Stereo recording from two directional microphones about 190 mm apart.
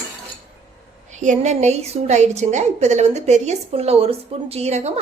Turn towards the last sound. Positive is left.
turn(degrees=-35)  # may be behind; listen again after turning